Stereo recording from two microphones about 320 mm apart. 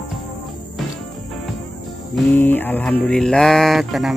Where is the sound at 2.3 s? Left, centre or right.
Centre.